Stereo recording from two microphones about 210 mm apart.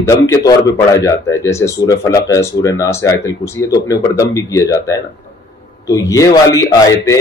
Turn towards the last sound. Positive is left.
turn(degrees=15)  # may be behind; listen again after turning